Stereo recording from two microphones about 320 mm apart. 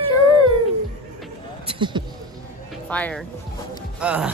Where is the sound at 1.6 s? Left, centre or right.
Centre.